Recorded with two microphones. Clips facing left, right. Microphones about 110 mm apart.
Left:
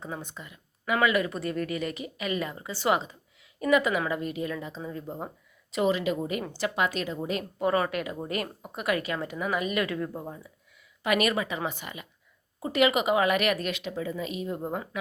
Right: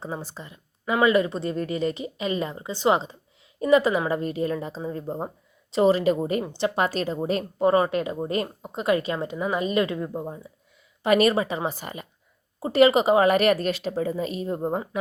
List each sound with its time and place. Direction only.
0.0 s a woman's voice: 35° right (ahead or behind)
6.4 s speech: 25° right (ahead or behind)
6.7 s speech: 40° right (ahead or behind); by 10.5 s 20° right (ahead or behind)
11.0 s a woman's voice: 35° right (ahead or behind)